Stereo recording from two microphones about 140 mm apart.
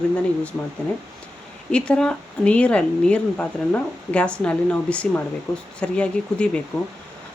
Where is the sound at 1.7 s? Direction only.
5° left (ahead or behind).